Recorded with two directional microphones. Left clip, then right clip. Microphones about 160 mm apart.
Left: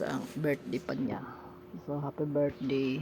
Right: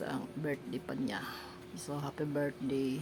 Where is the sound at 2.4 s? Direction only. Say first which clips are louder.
Left 4 dB; 15° left (ahead or behind).